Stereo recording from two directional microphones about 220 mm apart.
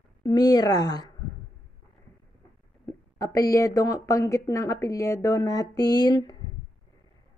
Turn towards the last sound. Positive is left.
turn(degrees=15)  # may be behind; listen again after turning